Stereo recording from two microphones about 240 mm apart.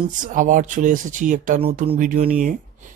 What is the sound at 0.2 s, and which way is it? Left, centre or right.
Speech, right.